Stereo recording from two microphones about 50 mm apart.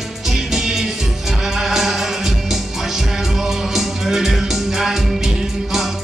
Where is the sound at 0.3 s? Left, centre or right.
Centre.